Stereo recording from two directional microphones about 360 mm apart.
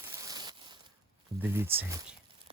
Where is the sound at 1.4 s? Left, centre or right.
Centre.